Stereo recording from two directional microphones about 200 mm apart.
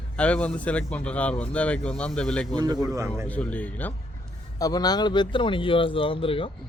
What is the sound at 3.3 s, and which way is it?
Speech, 5° left (ahead or behind).